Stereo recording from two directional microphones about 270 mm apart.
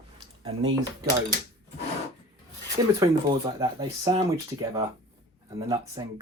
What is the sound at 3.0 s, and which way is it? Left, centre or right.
Speech, centre.